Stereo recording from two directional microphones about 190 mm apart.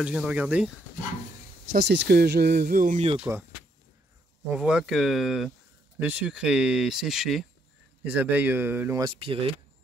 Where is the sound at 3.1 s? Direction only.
10° right (ahead or behind).